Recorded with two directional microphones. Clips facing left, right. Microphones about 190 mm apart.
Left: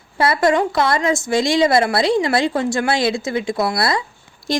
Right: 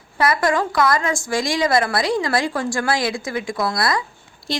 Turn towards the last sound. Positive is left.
turn(degrees=45)  # may be behind; listen again after turning